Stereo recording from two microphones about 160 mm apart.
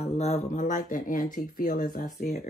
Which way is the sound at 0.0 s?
40° left (ahead or behind).